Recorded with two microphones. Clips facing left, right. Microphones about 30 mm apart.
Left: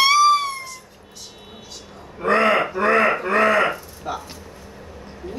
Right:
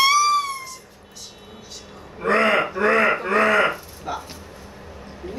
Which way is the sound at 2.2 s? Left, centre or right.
Centre.